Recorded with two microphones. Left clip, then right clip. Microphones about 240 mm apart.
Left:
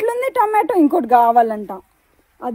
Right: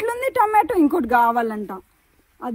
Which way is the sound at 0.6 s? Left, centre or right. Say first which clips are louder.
Left 4 dB; left.